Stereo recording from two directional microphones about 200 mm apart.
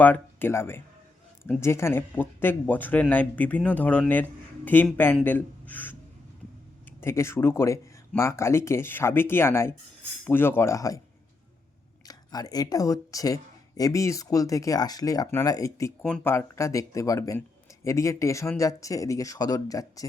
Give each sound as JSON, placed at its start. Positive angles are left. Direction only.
{"t": 0.0, "sound": "speech", "side_deg": 10}
{"t": 7.0, "sound": "speech", "side_deg": 15}
{"t": 12.0, "sound": "speech", "side_deg": 20}